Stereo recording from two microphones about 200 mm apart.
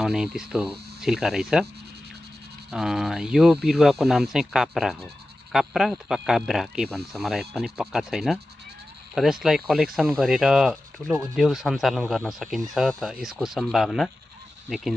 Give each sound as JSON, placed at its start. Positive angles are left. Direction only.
{"t": 0.0, "sound": "speech", "side_deg": -5}
{"t": 2.7, "sound": "speech", "side_deg": 0}